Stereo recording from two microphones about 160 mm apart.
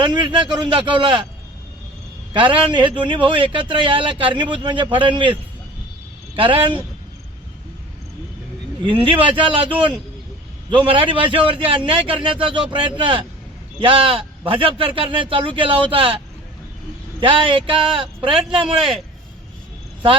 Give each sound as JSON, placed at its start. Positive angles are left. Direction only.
{"t": 0.0, "sound": "a man's voice", "side_deg": -30}
{"t": 2.3, "sound": "a man's voice", "side_deg": -30}
{"t": 6.3, "sound": "a man's voice", "side_deg": -35}
{"t": 8.8, "sound": "a man's voice", "side_deg": -30}
{"t": 17.2, "sound": "a man's voice", "side_deg": -30}
{"t": 18.8, "sound": "a man's voice", "side_deg": 0}